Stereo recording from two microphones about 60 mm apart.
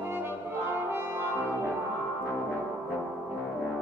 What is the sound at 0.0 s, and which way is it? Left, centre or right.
Brass instrument, right.